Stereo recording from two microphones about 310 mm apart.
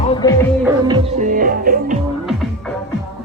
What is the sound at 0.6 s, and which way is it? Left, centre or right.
Music, centre.